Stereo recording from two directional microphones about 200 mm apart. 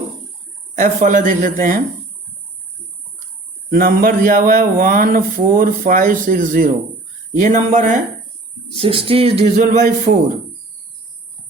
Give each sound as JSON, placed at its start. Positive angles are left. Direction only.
{"t": 0.8, "sound": "speech", "side_deg": -40}
{"t": 3.7, "sound": "speech", "side_deg": -45}
{"t": 8.8, "sound": "a man's voice", "side_deg": -25}